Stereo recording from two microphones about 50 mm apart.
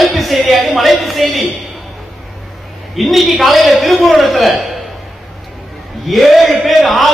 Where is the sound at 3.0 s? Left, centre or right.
Centre.